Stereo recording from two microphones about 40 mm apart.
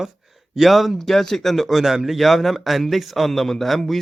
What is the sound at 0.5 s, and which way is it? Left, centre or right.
A man's voice, centre.